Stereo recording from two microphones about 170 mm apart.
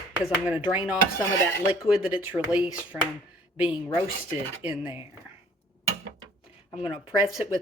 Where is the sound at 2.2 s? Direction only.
10° right (ahead or behind).